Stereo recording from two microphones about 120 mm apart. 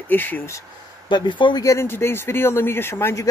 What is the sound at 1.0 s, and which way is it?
Speech, 40° left (ahead or behind).